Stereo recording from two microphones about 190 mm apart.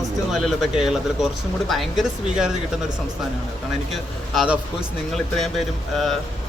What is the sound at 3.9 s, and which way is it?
Speech, 5° right (ahead or behind).